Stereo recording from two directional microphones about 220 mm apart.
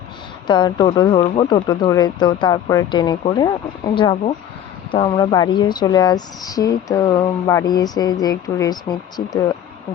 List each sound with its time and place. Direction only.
0.4 s speech: 20° left (ahead or behind)